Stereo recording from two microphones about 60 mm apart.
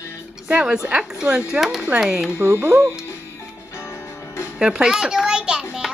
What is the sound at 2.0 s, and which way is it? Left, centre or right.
Speech, centre.